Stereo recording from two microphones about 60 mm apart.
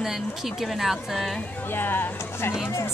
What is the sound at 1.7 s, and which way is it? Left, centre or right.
Speech, left.